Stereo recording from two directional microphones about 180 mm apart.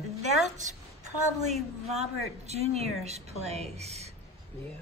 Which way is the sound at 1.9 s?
35° right (ahead or behind).